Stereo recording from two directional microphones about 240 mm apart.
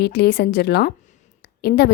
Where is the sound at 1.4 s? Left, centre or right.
Left.